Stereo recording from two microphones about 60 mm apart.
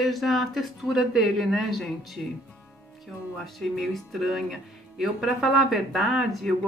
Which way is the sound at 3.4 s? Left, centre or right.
Centre.